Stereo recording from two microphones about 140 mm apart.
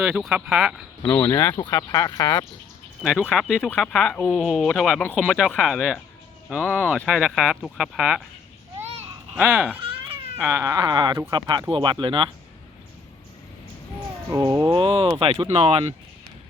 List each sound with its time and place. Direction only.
0.0 s speech: 5° right (ahead or behind)
1.0 s speech: 20° left (ahead or behind)
3.0 s speech: 5° right (ahead or behind)
9.4 s speech: 15° right (ahead or behind)
9.8 s a sound: 40° right (ahead or behind)
10.2 s speech: 15° right (ahead or behind); by 12.3 s 35° right (ahead or behind)
14.3 s speech: 25° right (ahead or behind)
14.8 s speech: 40° right (ahead or behind)